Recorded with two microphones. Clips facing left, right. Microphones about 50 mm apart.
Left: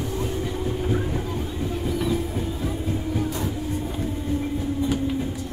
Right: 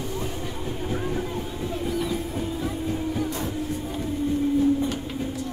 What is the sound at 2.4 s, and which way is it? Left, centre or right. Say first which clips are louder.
Train: even; centre.